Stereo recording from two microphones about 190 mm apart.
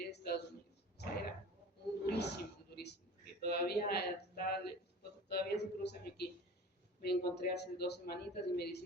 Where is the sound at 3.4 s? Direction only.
55° left (ahead or behind).